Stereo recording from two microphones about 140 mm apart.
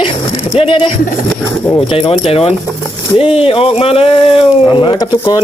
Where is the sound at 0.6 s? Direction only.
40° left (ahead or behind).